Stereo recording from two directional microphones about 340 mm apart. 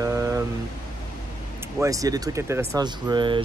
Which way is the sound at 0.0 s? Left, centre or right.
Centre.